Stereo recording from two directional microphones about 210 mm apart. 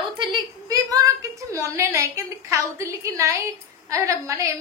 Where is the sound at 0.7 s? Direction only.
15° right (ahead or behind).